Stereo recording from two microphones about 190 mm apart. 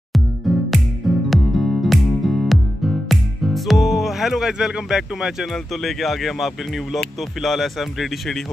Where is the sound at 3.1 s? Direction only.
Centre (ahead or behind).